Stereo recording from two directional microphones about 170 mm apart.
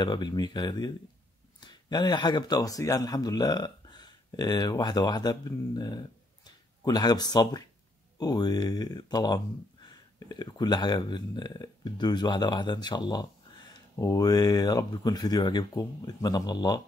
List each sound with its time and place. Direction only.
0.0 s a man's voice: 25° left (ahead or behind)